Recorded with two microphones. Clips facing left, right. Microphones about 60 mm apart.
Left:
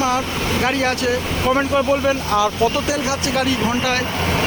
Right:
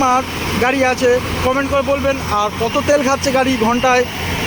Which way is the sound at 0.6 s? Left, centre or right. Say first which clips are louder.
Right 7 dB; right.